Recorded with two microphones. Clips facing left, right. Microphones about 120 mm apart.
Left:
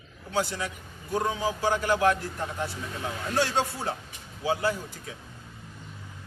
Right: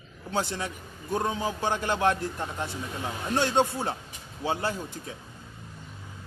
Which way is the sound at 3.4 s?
20° right (ahead or behind).